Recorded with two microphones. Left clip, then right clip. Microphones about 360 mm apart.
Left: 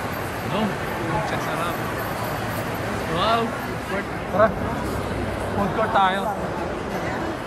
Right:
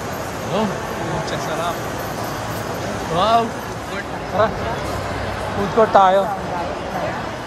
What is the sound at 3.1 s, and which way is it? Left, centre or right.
Speech, centre.